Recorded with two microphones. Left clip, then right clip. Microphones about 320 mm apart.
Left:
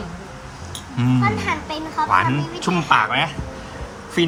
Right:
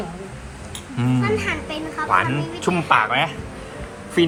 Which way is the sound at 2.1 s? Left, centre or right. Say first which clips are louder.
Even; centre.